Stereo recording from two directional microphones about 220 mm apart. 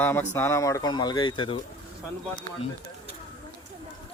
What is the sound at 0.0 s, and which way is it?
Speech, 10° left (ahead or behind).